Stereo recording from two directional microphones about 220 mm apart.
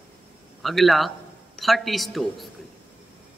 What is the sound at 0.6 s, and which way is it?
Speech, centre (ahead or behind).